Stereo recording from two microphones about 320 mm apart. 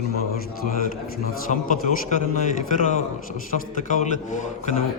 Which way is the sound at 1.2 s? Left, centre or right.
Left.